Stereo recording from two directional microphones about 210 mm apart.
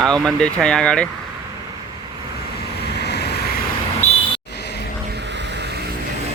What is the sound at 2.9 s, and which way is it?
Vehicle, 50° left (ahead or behind).